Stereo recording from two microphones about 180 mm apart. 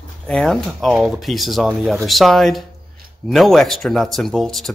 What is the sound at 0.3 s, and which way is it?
Speech, 5° left (ahead or behind).